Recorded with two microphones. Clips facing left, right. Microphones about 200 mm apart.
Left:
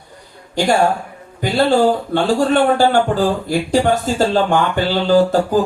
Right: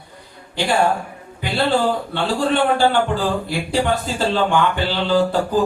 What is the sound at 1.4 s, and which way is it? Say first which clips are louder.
Music: left 5 dB; 45° left (ahead or behind).